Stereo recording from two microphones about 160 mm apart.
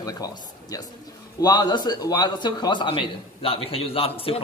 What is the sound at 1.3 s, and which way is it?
A man's voice, 25° left (ahead or behind).